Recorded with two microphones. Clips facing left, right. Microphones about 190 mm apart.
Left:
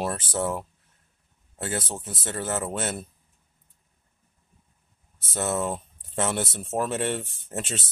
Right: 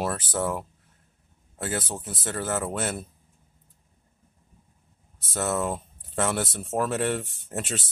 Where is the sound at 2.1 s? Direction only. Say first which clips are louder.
Right 1 dB; 20° left (ahead or behind).